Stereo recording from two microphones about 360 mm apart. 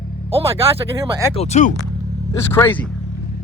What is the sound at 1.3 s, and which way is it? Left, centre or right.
Speech, centre.